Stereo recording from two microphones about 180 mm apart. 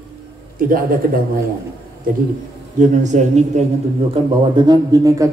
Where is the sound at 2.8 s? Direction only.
40° right (ahead or behind).